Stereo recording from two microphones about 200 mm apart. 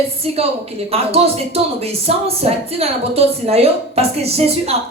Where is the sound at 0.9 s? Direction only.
30° right (ahead or behind).